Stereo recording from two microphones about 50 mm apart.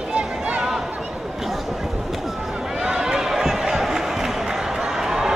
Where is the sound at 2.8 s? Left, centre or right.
Centre.